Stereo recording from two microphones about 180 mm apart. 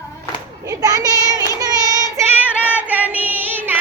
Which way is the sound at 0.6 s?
20° right (ahead or behind).